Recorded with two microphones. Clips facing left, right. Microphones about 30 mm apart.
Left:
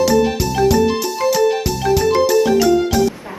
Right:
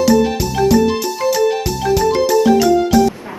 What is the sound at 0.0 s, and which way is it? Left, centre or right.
Music, centre.